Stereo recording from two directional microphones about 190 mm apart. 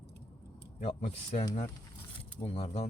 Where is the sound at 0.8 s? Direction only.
40° left (ahead or behind).